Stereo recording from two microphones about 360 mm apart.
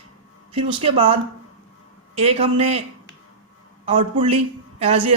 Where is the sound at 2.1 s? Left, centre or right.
Centre.